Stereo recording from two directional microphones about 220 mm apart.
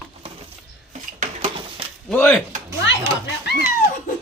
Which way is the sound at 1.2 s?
30° right (ahead or behind).